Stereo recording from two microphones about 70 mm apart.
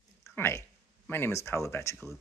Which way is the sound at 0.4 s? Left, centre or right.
Left.